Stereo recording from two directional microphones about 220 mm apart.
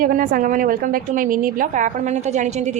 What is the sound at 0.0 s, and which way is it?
A woman's voice, 40° right (ahead or behind).